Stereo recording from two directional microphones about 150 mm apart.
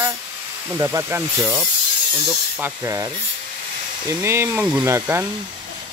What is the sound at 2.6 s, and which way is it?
Speech, 20° right (ahead or behind).